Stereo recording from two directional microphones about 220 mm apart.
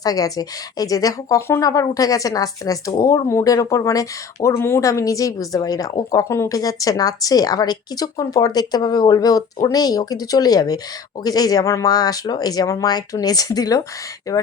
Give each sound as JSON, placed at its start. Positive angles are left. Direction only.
{"t": 0.0, "sound": "a woman's voice", "side_deg": 15}